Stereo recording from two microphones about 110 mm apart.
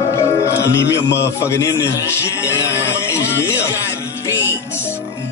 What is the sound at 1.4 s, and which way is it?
A man's voice, 25° left (ahead or behind).